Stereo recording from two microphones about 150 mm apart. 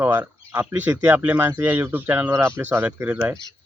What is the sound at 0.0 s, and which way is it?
Speech, 15° right (ahead or behind).